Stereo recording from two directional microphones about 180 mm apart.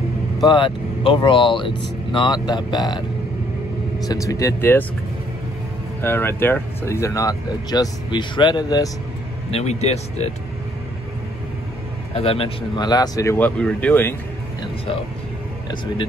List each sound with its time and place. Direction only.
0.5 s speech: 25° left (ahead or behind)
4.0 s speech: 20° left (ahead or behind)
5.9 s speech: 10° left (ahead or behind)
9.5 s speech: 35° left (ahead or behind)
12.1 s speech: 30° left (ahead or behind); by 14.1 s 10° left (ahead or behind)